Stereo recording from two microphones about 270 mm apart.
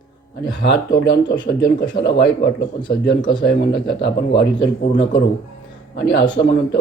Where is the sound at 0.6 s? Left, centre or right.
Left.